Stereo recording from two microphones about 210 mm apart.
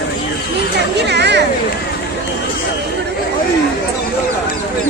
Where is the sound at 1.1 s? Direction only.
55° right (ahead or behind).